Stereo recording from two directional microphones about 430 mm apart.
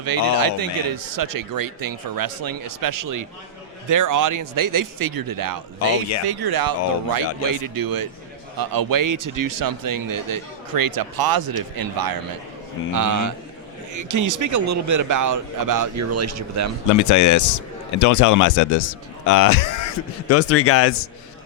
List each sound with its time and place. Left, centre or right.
0.3 s speech: right
16.9 s speech: left